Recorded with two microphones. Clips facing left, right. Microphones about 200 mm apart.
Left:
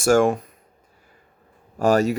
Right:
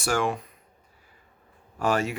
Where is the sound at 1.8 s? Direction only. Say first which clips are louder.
Left 7 dB; 40° left (ahead or behind).